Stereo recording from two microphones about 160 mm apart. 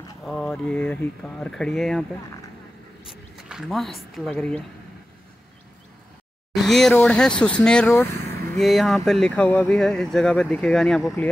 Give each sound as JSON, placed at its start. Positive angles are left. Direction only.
{"t": 0.2, "sound": "speech", "side_deg": 5}
{"t": 3.1, "sound": "speech", "side_deg": -5}
{"t": 6.5, "sound": "speech", "side_deg": 0}
{"t": 7.9, "sound": "vehicle", "side_deg": 15}
{"t": 8.5, "sound": "speech", "side_deg": 0}